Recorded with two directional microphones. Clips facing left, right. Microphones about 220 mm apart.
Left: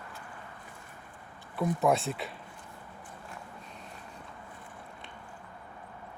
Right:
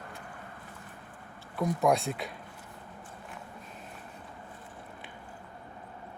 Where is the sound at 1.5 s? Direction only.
Centre (ahead or behind).